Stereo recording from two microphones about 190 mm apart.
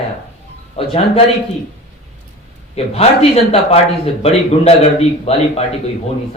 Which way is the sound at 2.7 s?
30° left (ahead or behind).